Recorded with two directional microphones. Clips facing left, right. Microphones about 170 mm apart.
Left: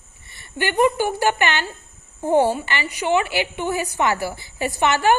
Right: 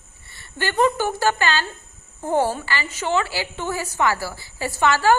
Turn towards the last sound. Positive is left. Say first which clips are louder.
# even
turn(degrees=20)  # may be behind; listen again after turning